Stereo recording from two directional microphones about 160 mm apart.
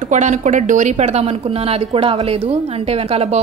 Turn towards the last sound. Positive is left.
turn(degrees=-40)  # may be behind; listen again after turning